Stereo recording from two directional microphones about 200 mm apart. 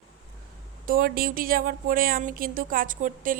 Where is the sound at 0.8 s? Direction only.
45° right (ahead or behind).